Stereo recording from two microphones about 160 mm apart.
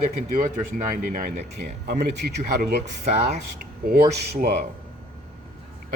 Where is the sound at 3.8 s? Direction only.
70° right (ahead or behind).